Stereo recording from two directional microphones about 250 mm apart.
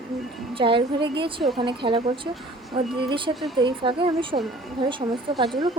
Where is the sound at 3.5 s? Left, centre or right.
Centre.